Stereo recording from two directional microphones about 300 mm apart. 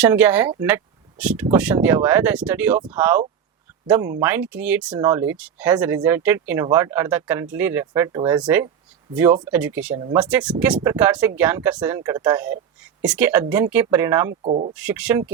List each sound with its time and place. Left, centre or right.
0.0 s speech: centre
14.4 s speech: right
14.7 s speech: centre